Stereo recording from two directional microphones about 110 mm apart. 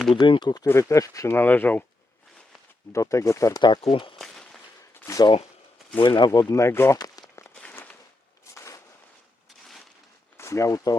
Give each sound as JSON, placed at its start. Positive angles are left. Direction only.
{"t": 0.1, "sound": "speech", "side_deg": 45}
{"t": 0.7, "sound": "speech", "side_deg": 25}
{"t": 2.9, "sound": "speech", "side_deg": 25}
{"t": 3.9, "sound": "speech", "side_deg": 50}
{"t": 4.2, "sound": "a sound", "side_deg": 5}
{"t": 4.9, "sound": "a sound", "side_deg": 30}
{"t": 6.0, "sound": "speech", "side_deg": 40}
{"t": 6.4, "sound": "speech", "side_deg": 25}
{"t": 7.0, "sound": "walk", "side_deg": 35}
{"t": 7.5, "sound": "walk", "side_deg": 15}
{"t": 8.5, "sound": "a sound", "side_deg": 30}
{"t": 10.3, "sound": "speech", "side_deg": 25}